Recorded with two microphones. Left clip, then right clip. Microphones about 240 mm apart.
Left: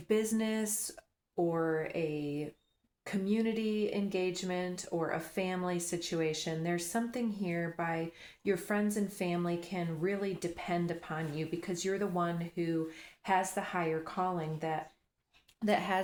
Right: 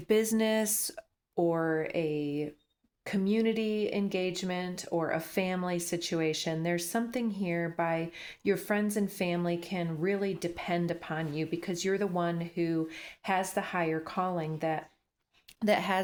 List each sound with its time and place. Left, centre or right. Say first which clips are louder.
0.1 s speech: right 5 dB; right